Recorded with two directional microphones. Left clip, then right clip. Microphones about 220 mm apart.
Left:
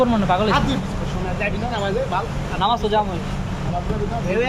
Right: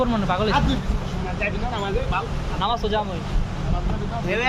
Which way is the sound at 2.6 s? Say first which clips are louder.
Left 4 dB; 5° left (ahead or behind).